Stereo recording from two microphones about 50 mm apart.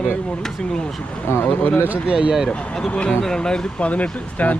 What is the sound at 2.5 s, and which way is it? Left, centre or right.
Speech, centre.